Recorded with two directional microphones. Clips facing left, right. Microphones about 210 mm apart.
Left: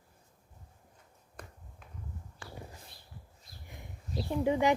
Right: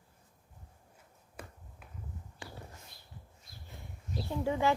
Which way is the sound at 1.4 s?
5° right (ahead or behind).